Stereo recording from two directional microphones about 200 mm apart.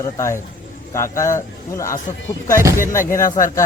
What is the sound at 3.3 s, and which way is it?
Speech, 15° left (ahead or behind).